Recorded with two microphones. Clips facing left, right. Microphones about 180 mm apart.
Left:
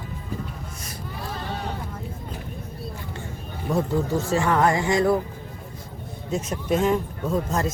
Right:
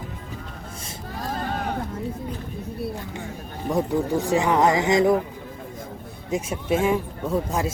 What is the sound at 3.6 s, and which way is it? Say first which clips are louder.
Speech: right 1 dB; 15° right (ahead or behind).